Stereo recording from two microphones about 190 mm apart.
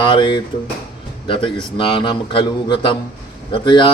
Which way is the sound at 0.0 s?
25° left (ahead or behind).